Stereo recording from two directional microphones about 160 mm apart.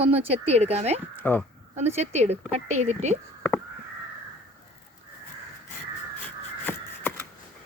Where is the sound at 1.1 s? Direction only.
10° left (ahead or behind).